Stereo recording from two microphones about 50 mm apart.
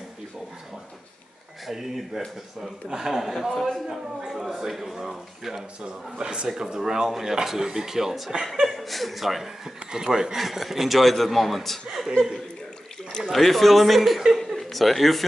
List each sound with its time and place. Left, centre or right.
1.7 s speech: centre
5.9 s speech: centre
8.5 s speech: centre
13.3 s speech: centre